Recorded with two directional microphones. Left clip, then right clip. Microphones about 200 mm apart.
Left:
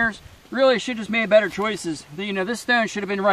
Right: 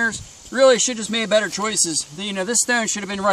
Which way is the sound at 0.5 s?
10° right (ahead or behind).